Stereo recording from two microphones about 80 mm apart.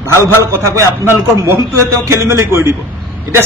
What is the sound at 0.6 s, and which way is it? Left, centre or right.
Speech, right.